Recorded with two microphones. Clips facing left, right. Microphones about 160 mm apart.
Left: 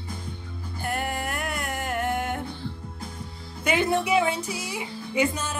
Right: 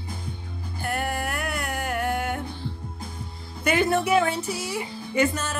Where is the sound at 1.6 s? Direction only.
20° left (ahead or behind).